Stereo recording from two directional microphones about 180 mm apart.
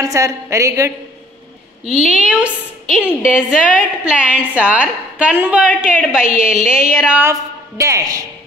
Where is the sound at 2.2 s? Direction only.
5° right (ahead or behind).